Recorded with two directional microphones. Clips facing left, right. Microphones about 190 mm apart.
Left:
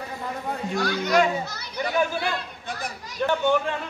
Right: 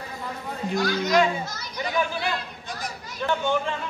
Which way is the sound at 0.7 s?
65° left (ahead or behind).